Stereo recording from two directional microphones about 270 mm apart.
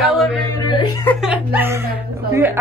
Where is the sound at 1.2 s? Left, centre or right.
Centre.